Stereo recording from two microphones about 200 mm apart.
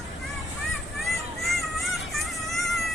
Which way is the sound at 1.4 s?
Centre (ahead or behind).